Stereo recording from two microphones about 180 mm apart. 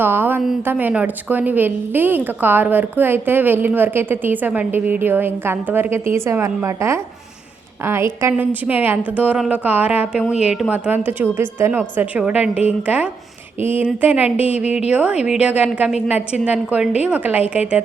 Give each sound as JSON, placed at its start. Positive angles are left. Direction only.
{"t": 0.0, "sound": "a woman's voice", "side_deg": -10}
{"t": 14.3, "sound": "speech", "side_deg": 35}
{"t": 14.8, "sound": "a woman's voice", "side_deg": -5}